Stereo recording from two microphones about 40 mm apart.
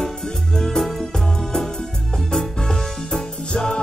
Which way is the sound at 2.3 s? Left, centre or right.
Centre.